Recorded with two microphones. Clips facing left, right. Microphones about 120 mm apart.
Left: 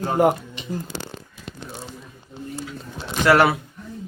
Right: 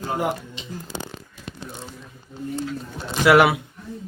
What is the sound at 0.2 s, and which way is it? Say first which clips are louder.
Speech: left 7 dB; 50° left (ahead or behind).